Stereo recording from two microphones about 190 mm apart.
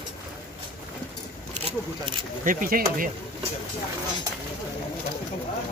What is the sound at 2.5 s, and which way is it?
Speech, 45° right (ahead or behind).